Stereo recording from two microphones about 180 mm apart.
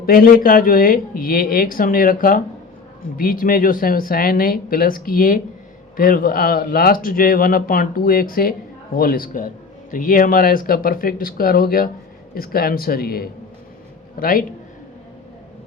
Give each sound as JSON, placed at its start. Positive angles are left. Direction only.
{"t": 0.0, "sound": "speech", "side_deg": 55}